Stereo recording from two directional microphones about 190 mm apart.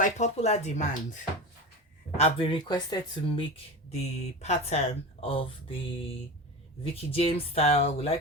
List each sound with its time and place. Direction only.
0.0 s speech: 35° left (ahead or behind)